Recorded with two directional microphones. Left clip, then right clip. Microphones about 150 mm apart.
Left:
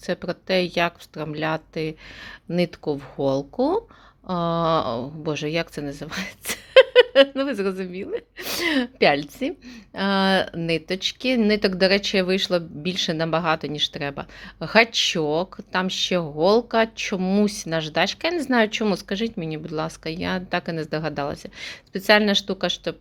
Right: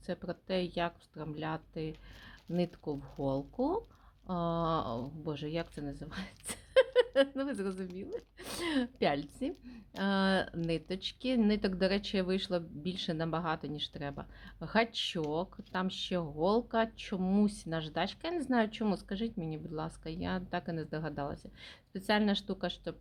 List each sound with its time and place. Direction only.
0.0 s speech: 15° left (ahead or behind)